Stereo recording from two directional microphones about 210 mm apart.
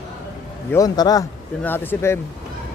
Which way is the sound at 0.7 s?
15° left (ahead or behind).